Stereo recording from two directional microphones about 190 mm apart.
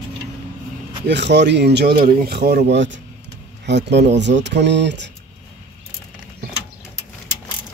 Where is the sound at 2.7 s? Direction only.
70° right (ahead or behind).